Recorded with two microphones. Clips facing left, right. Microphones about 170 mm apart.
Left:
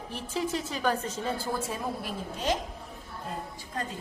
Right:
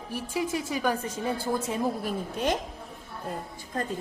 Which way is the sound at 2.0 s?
55° right (ahead or behind).